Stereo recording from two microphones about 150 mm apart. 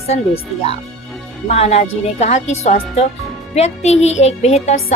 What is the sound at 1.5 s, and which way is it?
A woman's voice, 45° left (ahead or behind).